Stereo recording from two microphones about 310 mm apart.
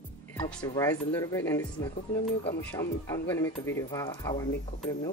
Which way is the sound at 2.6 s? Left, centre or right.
Centre.